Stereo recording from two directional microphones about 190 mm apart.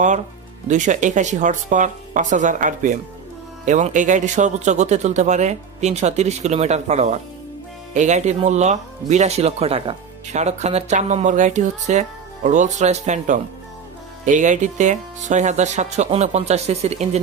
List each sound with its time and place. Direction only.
0.7 s speech: 40° right (ahead or behind)